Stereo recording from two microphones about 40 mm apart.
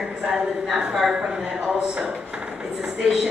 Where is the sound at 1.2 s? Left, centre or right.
Centre.